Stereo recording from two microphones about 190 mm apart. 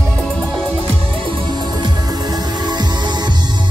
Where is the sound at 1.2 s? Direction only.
25° right (ahead or behind).